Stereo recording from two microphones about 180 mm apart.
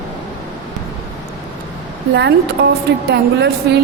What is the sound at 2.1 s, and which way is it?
A woman's voice, 70° right (ahead or behind).